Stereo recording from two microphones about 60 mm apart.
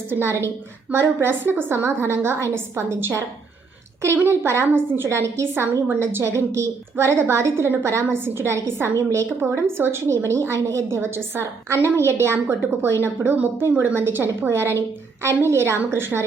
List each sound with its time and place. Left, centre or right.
0.1 s a woman's voice: right
1.8 s a woman's voice: right
4.2 s a woman's voice: right
9.0 s a woman's voice: right
9.4 s a woman's voice: right
10.1 s a woman's voice: right